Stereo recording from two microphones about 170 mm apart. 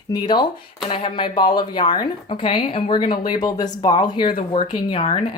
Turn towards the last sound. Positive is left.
turn(degrees=30)  # may be behind; listen again after turning